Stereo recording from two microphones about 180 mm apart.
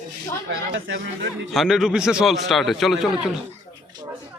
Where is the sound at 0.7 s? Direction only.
90° right.